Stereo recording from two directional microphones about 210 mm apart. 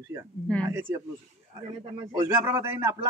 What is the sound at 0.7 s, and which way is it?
Speech, 10° right (ahead or behind).